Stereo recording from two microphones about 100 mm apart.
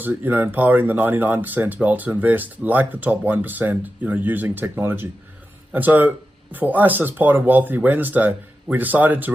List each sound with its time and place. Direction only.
0.0 s speech: 20° right (ahead or behind)